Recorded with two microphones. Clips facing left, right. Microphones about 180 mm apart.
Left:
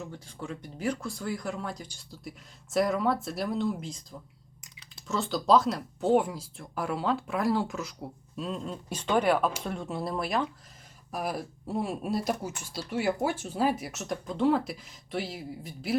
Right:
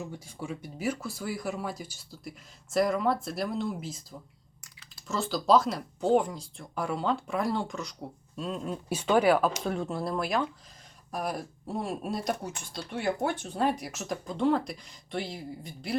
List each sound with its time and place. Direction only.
0.0 s speech: 10° right (ahead or behind)
4.6 s a sound: 20° left (ahead or behind)
5.0 s speech: centre (ahead or behind)